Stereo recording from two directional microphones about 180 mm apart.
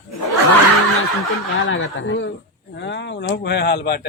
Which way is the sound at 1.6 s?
90° left.